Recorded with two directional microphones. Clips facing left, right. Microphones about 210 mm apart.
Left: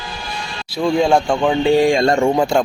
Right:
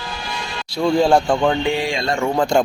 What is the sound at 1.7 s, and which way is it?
Speech, 45° left (ahead or behind).